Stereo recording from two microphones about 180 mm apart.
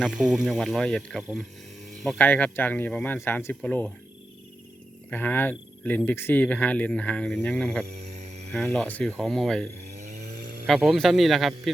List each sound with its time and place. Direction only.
0.0 s speech: 5° right (ahead or behind)
5.1 s speech: 10° left (ahead or behind)
10.2 s a sound: 60° right (ahead or behind)
10.7 s speech: centre (ahead or behind)